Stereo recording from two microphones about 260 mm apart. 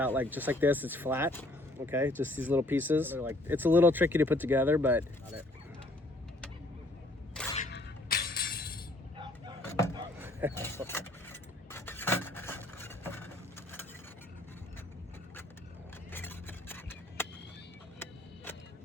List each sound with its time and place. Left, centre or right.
0.0 s speech: centre
7.7 s music: left
9.6 s a sound: centre
9.9 s a sound: centre
10.5 s vehicle: centre
16.1 s vehicle: centre